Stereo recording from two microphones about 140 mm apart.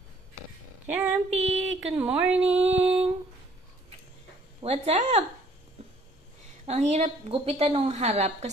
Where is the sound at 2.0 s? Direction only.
10° right (ahead or behind).